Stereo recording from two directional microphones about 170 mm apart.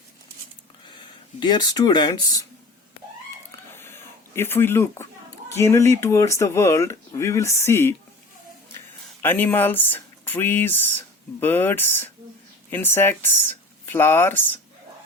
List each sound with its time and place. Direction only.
1.4 s speech: 25° left (ahead or behind)
3.5 s a sound: 15° left (ahead or behind)
5.5 s speech: 15° left (ahead or behind)
9.2 s speech: 10° left (ahead or behind)